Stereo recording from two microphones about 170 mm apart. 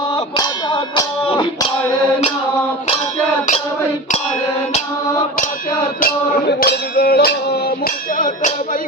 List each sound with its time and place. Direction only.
0.3 s clang: 25° left (ahead or behind)
6.0 s music: 70° left (ahead or behind)